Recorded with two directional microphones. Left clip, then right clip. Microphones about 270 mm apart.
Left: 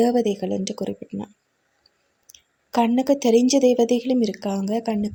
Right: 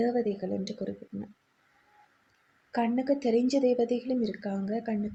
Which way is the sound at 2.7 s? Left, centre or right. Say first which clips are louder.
Left 9 dB; left.